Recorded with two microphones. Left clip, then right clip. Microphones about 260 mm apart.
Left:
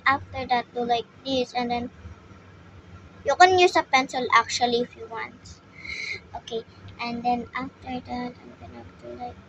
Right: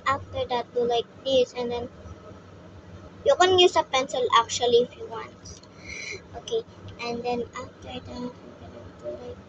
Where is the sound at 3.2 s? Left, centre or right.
Left.